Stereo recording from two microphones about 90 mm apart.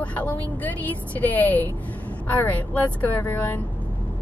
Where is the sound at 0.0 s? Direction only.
15° left (ahead or behind).